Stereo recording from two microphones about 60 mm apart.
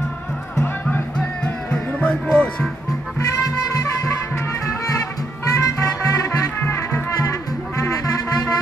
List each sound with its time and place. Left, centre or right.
1.1 s music: centre
2.3 s speech: centre
3.2 s music: left
5.4 s music: left
6.6 s music: left
7.2 s music: left